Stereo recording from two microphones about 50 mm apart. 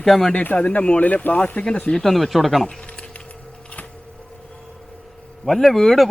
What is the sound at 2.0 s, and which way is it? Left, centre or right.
Speech, centre.